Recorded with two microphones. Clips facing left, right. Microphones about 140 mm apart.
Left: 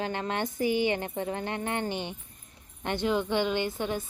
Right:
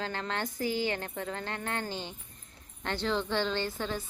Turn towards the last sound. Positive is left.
turn(degrees=15)  # may be behind; listen again after turning